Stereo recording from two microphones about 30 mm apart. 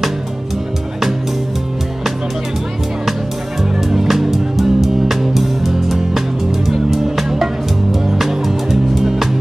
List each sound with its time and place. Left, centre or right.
3.9 s music: centre